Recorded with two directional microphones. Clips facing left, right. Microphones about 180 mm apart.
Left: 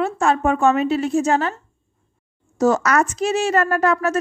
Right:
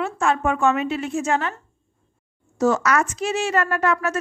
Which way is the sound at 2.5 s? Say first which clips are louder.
Left 2 dB; 40° left (ahead or behind).